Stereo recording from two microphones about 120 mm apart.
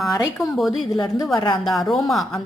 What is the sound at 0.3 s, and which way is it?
A woman's voice, 5° left (ahead or behind).